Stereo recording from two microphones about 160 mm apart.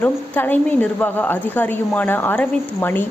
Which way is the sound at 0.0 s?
10° left (ahead or behind).